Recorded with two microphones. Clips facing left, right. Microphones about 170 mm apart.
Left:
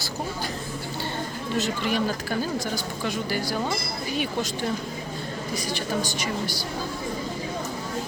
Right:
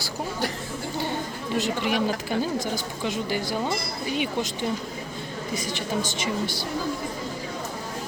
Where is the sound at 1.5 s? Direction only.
15° right (ahead or behind).